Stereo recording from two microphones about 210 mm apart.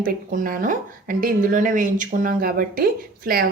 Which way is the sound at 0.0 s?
40° right (ahead or behind).